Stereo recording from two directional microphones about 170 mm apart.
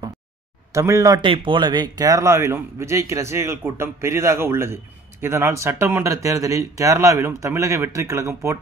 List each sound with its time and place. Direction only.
0.7 s a man's voice: 15° right (ahead or behind)
1.2 s a man's voice: 30° right (ahead or behind)